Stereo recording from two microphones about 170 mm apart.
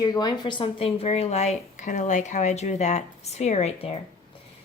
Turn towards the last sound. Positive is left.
turn(degrees=35)  # may be behind; listen again after turning